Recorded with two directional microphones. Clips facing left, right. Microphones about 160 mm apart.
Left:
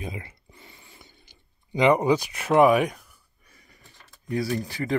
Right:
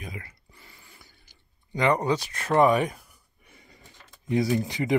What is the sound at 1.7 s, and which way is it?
Speech, 10° left (ahead or behind).